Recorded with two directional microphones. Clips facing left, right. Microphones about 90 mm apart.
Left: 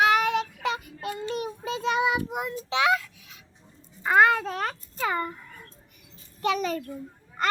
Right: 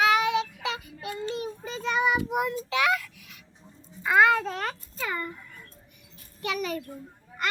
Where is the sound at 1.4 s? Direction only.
65° left (ahead or behind).